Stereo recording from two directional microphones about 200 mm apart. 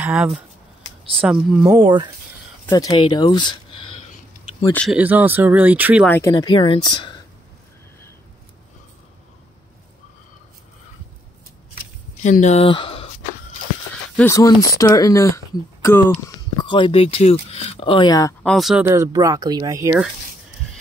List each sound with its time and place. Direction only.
0.0 s speech: 5° right (ahead or behind)
1.8 s speech: 25° right (ahead or behind)
2.7 s speech: 20° left (ahead or behind)
4.9 s speech: 10° right (ahead or behind)
6.0 s speech: 10° left (ahead or behind)
6.3 s speech: 25° left (ahead or behind)
12.2 s speech: 35° left (ahead or behind)
14.1 s speech: 15° left (ahead or behind)
16.6 s speech: 25° left (ahead or behind)
18.4 s speech: centre (ahead or behind)
18.9 s speech: 15° right (ahead or behind)